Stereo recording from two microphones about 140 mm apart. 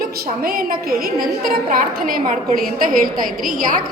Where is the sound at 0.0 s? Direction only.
90° right.